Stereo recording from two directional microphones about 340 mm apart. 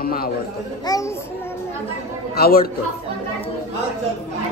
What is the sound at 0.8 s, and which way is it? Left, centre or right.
Speech, centre.